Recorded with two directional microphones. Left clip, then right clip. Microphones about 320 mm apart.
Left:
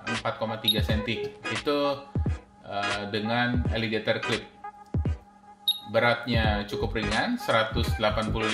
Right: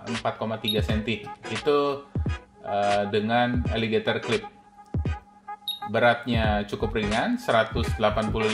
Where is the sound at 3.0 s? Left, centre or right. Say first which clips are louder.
Right 4 dB; right.